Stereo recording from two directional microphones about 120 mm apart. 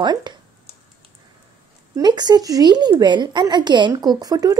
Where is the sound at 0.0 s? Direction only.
35° right (ahead or behind).